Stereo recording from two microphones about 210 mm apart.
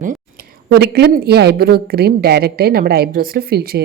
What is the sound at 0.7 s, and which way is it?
Speech, 50° right (ahead or behind).